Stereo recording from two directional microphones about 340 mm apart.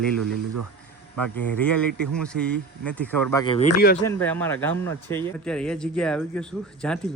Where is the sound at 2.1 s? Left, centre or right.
Centre.